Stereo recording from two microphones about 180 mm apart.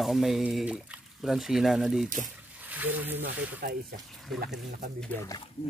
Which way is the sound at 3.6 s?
55° right (ahead or behind).